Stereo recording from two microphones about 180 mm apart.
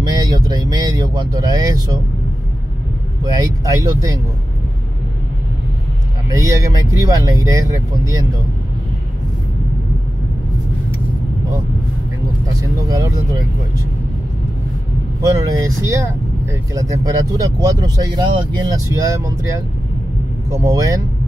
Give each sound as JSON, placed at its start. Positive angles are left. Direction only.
{"t": 0.1, "sound": "speech", "side_deg": -25}
{"t": 3.3, "sound": "speech", "side_deg": -20}
{"t": 6.2, "sound": "speech", "side_deg": -15}
{"t": 12.5, "sound": "speech", "side_deg": -20}
{"t": 15.3, "sound": "speech", "side_deg": -15}